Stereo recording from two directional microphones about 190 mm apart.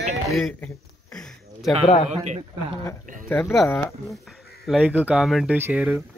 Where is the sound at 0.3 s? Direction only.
Centre (ahead or behind).